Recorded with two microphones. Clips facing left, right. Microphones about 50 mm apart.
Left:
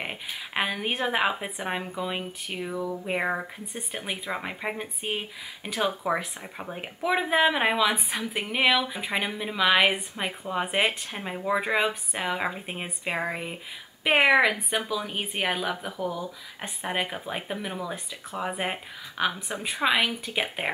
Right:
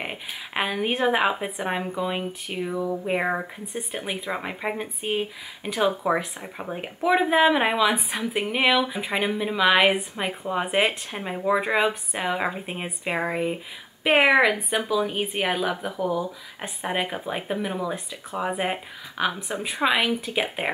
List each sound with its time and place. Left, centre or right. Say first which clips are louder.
0.0 s speech: right 1 dB; centre